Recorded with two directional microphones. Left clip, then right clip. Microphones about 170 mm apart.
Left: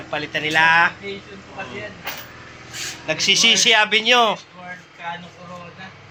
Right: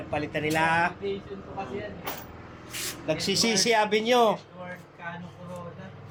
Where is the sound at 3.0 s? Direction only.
15° right (ahead or behind).